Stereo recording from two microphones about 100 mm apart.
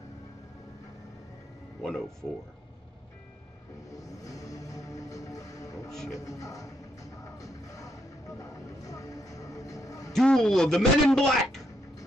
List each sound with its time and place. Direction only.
1.8 s speech: 5° left (ahead or behind)
3.9 s music: 35° left (ahead or behind)
10.1 s a man's voice: 5° left (ahead or behind)